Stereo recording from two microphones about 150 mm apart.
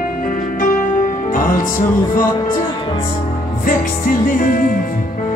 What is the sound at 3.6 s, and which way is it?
Music, 65° left (ahead or behind).